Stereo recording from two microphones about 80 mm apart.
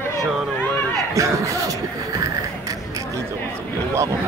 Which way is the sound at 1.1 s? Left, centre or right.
Right.